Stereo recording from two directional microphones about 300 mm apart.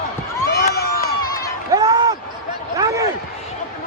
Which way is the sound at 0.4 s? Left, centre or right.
Left.